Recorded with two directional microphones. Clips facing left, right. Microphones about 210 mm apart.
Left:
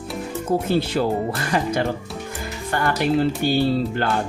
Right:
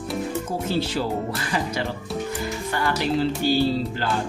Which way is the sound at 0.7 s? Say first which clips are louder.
Left 1 dB; 55° left (ahead or behind).